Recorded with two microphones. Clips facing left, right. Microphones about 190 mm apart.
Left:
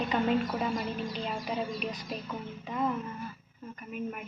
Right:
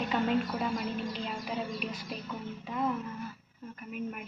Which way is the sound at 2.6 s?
Centre (ahead or behind).